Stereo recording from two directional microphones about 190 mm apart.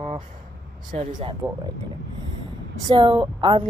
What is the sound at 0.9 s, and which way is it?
Speech, 35° right (ahead or behind).